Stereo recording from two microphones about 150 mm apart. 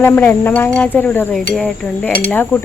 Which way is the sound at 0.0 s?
15° left (ahead or behind).